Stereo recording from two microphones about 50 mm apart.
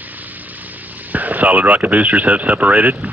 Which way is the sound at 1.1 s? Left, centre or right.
Right.